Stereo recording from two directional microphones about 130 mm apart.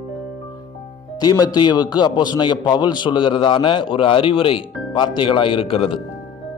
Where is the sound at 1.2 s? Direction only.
30° left (ahead or behind).